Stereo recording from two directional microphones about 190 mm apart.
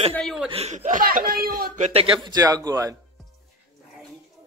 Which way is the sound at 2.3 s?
20° right (ahead or behind).